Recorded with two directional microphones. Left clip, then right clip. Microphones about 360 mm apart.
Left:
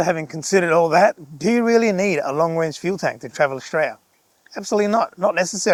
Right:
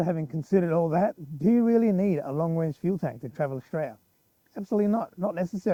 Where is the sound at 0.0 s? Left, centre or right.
Centre.